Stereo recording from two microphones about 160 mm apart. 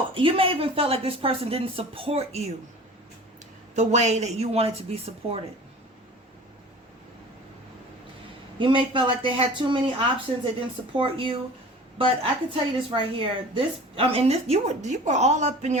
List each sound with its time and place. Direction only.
0.1 s a woman's voice: 35° right (ahead or behind)
3.8 s a woman's voice: 45° right (ahead or behind)
8.5 s a woman's voice: 30° right (ahead or behind)
10.9 s a woman's voice: 35° right (ahead or behind)